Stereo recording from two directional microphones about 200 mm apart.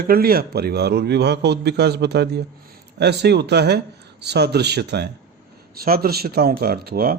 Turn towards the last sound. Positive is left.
turn(degrees=-50)  # may be behind; listen again after turning